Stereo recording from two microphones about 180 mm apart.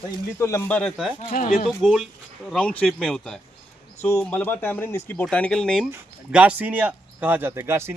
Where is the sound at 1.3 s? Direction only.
45° left (ahead or behind).